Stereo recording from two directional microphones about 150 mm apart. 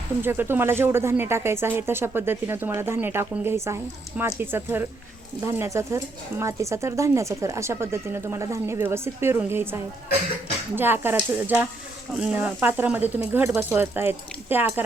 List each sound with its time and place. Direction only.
0.2 s speech: 15° right (ahead or behind)